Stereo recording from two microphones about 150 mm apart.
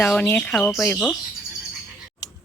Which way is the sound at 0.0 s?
10° left (ahead or behind).